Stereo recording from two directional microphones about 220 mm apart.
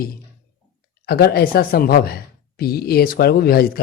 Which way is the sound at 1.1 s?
45° left (ahead or behind).